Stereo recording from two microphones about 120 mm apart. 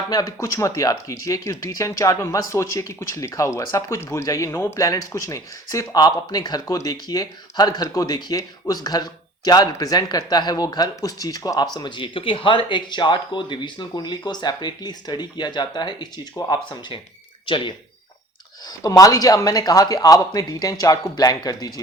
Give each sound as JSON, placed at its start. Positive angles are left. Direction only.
{"t": 0.1, "sound": "speech", "side_deg": 30}
{"t": 17.4, "sound": "speech", "side_deg": 45}
{"t": 18.8, "sound": "speech", "side_deg": 30}